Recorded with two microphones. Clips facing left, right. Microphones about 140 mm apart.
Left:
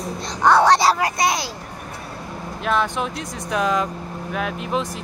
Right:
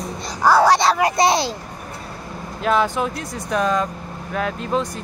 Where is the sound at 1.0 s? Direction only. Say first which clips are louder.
Right 4 dB; 30° right (ahead or behind).